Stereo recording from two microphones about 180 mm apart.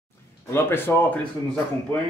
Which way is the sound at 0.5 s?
15° left (ahead or behind).